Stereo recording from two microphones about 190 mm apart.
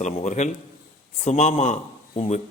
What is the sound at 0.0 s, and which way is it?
A man's voice, 40° left (ahead or behind).